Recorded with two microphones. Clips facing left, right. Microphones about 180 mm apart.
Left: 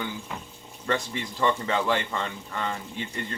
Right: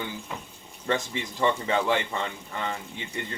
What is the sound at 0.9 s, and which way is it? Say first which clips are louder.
Speech: even; 15° right (ahead or behind).